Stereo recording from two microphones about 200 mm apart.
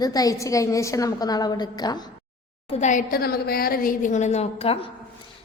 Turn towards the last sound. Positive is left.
turn(degrees=30)  # may be behind; listen again after turning